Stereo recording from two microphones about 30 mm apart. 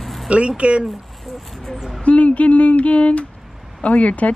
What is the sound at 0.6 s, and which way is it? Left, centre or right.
Speech, right.